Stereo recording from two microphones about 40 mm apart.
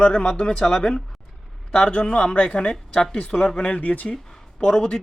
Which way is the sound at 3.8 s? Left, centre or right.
Left.